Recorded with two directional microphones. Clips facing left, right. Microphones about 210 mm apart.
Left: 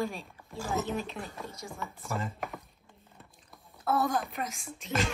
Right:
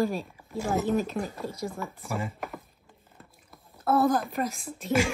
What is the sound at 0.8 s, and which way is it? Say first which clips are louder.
Speech: right 8 dB; 45° right (ahead or behind).